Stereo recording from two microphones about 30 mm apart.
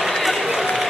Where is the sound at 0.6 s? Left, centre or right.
Centre.